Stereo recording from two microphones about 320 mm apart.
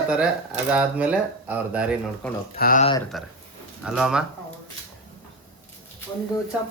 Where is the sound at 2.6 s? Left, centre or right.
Left.